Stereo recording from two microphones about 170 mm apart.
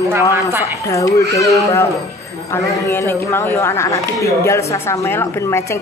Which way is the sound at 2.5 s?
15° left (ahead or behind).